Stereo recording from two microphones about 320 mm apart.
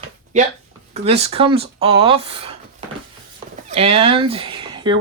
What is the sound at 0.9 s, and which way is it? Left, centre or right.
Speech, centre.